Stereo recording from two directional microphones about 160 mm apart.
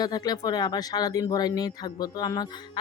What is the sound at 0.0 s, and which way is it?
Speech, 25° left (ahead or behind).